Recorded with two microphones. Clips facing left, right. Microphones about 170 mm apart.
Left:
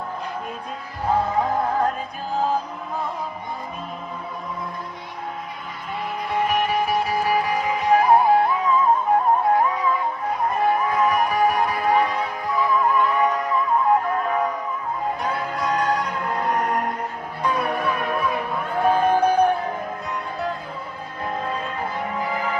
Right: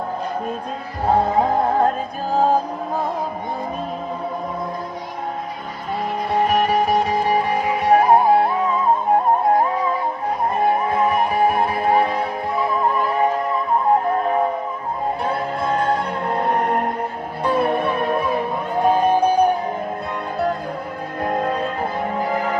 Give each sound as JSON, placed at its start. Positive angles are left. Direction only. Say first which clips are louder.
{"t": 1.0, "sound": "music", "louder": "right 4 dB", "side_deg": -35}
{"t": 6.3, "sound": "music", "louder": "right 4 dB", "side_deg": -35}
{"t": 7.8, "sound": "music", "louder": "right 3 dB", "side_deg": -55}
{"t": 8.0, "sound": "music", "louder": "right 2 dB", "side_deg": -35}
{"t": 21.2, "sound": "music", "louder": "right 6 dB", "side_deg": -50}